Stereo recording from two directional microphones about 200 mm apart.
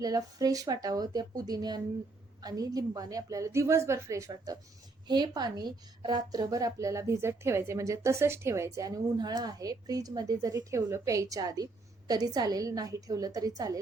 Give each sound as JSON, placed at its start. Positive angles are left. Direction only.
{"t": 0.0, "sound": "a woman's voice", "side_deg": -20}